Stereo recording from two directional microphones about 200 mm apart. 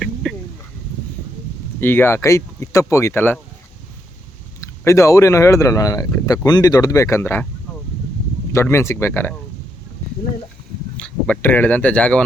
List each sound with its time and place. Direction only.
0.0 s a sound: centre (ahead or behind)
1.8 s speech: 10° left (ahead or behind)
4.8 s speech: 15° left (ahead or behind)
8.5 s speech: 15° left (ahead or behind)
10.9 s speech: 5° left (ahead or behind)